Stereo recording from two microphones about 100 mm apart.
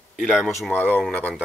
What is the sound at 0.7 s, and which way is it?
Speech, 15° left (ahead or behind).